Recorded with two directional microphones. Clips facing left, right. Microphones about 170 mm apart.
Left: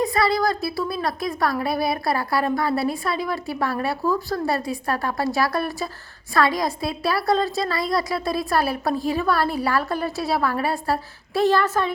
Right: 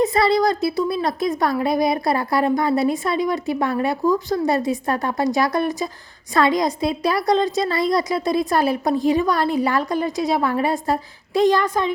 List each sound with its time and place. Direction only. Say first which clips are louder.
0.0 s speech: right 4 dB; 25° right (ahead or behind)